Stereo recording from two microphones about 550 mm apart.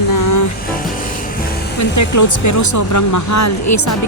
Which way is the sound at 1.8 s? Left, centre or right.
Left.